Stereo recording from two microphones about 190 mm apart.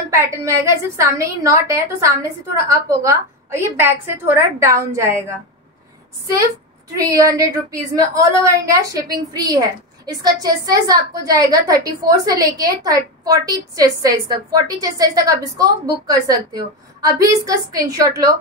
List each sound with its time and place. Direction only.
0.1 s a woman's voice: 15° right (ahead or behind)
6.9 s a woman's voice: 20° right (ahead or behind)